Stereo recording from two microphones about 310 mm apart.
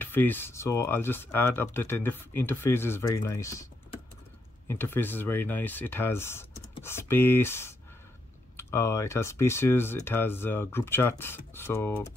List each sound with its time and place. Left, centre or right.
0.0 s speech: centre
4.6 s speech: centre